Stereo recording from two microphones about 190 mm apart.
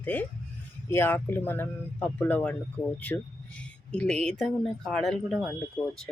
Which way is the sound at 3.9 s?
5° left (ahead or behind).